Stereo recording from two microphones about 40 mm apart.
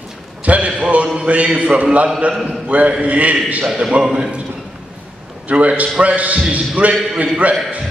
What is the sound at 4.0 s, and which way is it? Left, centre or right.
Speech, centre.